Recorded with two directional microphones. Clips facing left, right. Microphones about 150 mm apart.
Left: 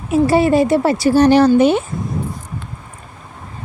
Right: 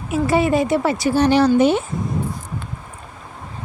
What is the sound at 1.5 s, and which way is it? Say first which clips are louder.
Speech: left 3 dB; 65° left (ahead or behind).